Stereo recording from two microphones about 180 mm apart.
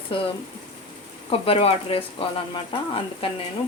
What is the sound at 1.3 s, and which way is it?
Speech, 30° left (ahead or behind).